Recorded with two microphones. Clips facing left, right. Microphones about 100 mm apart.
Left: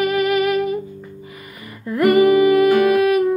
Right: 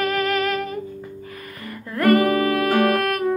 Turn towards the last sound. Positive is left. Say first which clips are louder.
# left 5 dB
turn(degrees=5)  # may be behind; listen again after turning